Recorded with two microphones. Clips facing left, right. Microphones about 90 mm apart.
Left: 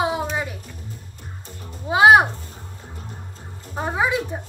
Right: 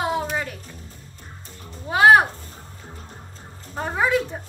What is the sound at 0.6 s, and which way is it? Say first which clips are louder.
Music: left 3 dB; 35° right (ahead or behind).